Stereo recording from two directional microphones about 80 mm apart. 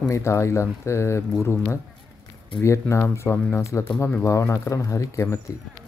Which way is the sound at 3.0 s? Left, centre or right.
Left.